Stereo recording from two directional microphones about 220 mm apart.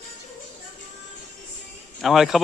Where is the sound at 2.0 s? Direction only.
Centre (ahead or behind).